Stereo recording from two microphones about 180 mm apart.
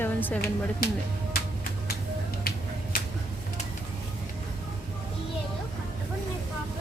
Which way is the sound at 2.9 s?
55° left (ahead or behind).